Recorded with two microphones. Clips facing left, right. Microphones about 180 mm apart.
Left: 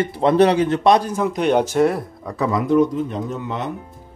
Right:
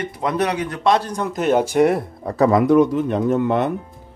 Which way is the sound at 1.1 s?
Centre (ahead or behind).